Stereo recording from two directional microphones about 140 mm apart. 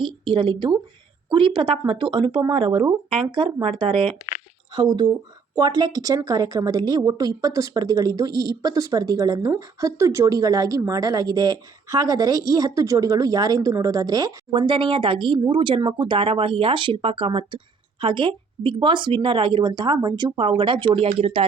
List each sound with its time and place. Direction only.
0.0 s a woman's voice: 35° right (ahead or behind)
14.5 s speech: 35° right (ahead or behind)